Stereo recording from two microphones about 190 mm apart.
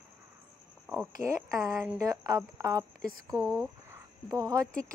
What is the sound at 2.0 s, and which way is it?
Speech, 20° right (ahead or behind).